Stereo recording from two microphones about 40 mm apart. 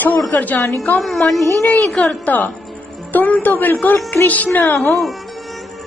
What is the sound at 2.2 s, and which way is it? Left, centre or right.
Music, left.